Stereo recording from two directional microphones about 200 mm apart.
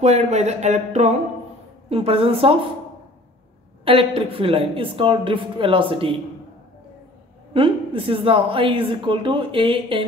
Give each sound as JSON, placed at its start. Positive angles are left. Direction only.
{"t": 0.0, "sound": "speech", "side_deg": -35}
{"t": 3.8, "sound": "speech", "side_deg": -25}
{"t": 7.5, "sound": "speech", "side_deg": -25}